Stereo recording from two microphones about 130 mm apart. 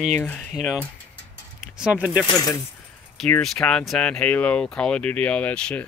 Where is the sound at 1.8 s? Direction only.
5° right (ahead or behind).